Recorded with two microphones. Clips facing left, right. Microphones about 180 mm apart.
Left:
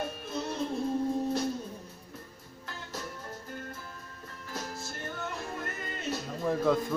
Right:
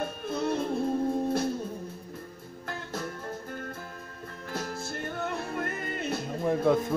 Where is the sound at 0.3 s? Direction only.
55° right (ahead or behind).